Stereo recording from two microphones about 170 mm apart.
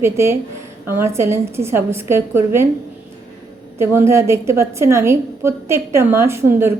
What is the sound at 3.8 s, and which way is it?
A woman's voice, 15° right (ahead or behind).